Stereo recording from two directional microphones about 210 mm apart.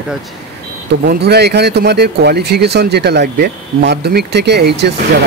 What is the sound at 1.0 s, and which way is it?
Speech, 50° right (ahead or behind).